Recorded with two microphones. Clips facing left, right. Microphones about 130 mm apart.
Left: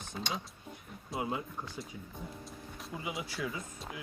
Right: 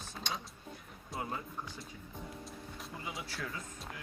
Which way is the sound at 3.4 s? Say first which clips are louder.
Left 4 dB; 10° left (ahead or behind).